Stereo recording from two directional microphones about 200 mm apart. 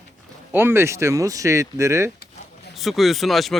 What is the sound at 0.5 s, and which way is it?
Speech, 10° right (ahead or behind).